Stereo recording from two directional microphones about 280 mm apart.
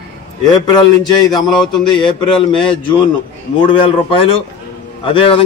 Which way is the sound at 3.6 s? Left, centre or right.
Centre.